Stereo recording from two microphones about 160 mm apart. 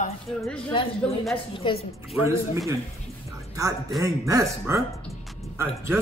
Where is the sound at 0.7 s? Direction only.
30° left (ahead or behind).